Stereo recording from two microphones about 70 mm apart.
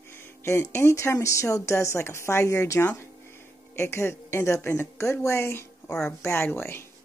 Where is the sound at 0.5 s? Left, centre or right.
Left.